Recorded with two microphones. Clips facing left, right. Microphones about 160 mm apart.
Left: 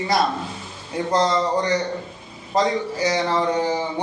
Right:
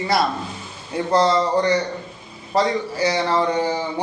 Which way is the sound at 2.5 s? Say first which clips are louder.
Right 1 dB; 15° left (ahead or behind).